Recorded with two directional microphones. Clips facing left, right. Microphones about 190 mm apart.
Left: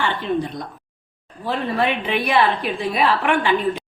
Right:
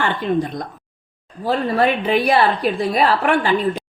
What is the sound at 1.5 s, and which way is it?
A woman's voice, 35° right (ahead or behind).